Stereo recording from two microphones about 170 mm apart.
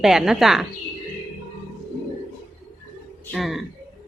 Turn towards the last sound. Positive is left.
turn(degrees=0)  # may be behind; listen again after turning